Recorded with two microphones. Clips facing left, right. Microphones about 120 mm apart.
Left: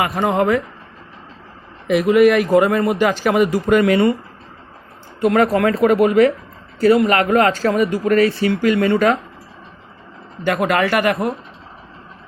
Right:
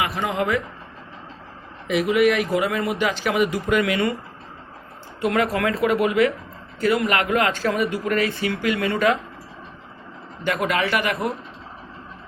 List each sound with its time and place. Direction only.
0.0 s a man's voice: 45° left (ahead or behind)
1.9 s a man's voice: 50° left (ahead or behind)
5.2 s speech: 40° left (ahead or behind)
10.4 s a man's voice: 45° left (ahead or behind)